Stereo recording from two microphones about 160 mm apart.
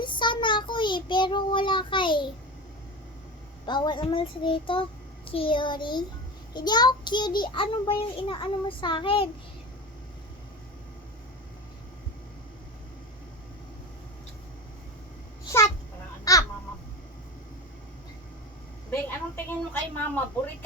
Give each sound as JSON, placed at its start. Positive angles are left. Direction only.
{"t": 0.0, "sound": "child singing", "side_deg": 30}
{"t": 3.7, "sound": "child singing", "side_deg": 30}
{"t": 5.3, "sound": "a child's voice", "side_deg": 35}
{"t": 15.4, "sound": "a sound", "side_deg": 20}
{"t": 16.3, "sound": "babbling", "side_deg": 20}
{"t": 19.5, "sound": "a woman's voice", "side_deg": 15}